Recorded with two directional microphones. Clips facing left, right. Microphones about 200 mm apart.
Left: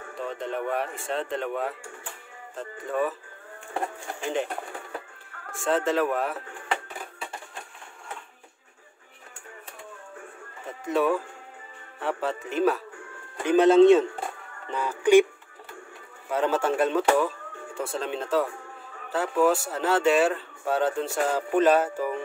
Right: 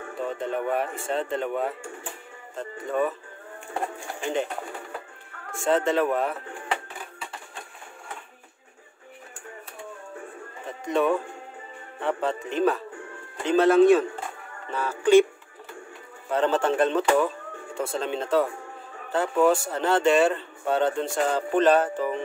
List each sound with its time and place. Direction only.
0.3 s speech: centre (ahead or behind)
5.6 s speech: centre (ahead or behind)
10.9 s speech: 5° left (ahead or behind)
16.3 s speech: 10° left (ahead or behind)